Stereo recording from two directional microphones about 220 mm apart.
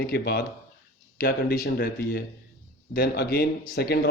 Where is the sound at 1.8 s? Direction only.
50° left (ahead or behind).